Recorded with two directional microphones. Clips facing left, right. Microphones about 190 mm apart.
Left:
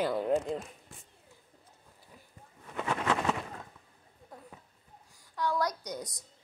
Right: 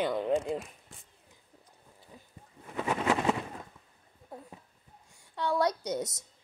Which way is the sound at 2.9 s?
15° right (ahead or behind).